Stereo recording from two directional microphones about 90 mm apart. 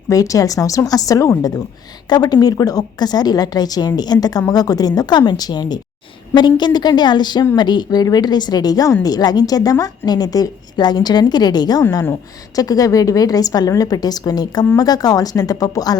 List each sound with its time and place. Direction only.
0.1 s a woman's voice: 40° left (ahead or behind)
11.8 s a woman's voice: 40° left (ahead or behind)